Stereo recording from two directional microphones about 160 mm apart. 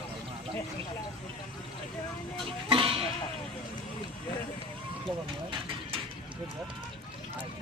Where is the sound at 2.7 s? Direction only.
35° right (ahead or behind).